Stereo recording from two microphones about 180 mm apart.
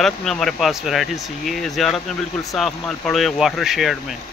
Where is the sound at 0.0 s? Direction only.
Centre (ahead or behind).